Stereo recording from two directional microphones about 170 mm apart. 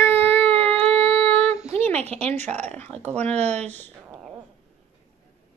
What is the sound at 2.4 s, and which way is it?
Speech, 40° right (ahead or behind).